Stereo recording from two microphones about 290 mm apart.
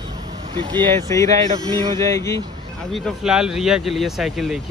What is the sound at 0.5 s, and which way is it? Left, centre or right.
Speech, centre.